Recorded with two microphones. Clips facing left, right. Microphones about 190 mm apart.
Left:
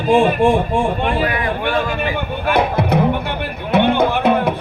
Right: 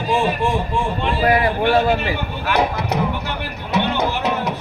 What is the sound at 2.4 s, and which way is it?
Music, 55° left (ahead or behind).